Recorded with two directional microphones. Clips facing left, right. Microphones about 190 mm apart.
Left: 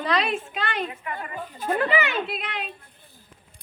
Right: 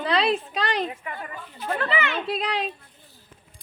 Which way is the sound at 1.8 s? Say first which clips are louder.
Left 3 dB; 15° left (ahead or behind).